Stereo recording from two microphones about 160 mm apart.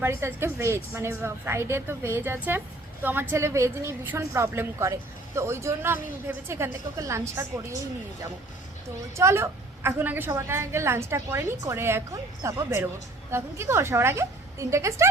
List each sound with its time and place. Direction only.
0.0 s a woman's voice: 15° right (ahead or behind)
9.1 s a woman's voice: 15° right (ahead or behind)